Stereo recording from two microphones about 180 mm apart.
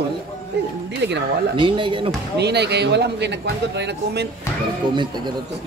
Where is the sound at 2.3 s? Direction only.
70° right (ahead or behind).